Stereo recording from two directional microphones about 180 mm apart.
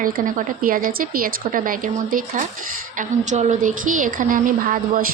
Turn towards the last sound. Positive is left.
turn(degrees=-50)  # may be behind; listen again after turning